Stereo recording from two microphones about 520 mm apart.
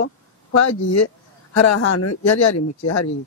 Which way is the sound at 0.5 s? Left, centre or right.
Left.